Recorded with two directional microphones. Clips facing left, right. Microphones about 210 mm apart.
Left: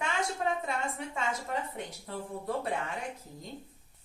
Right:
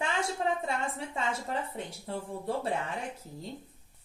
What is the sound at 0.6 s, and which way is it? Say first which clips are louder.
A woman's voice: right 1 dB; 30° right (ahead or behind).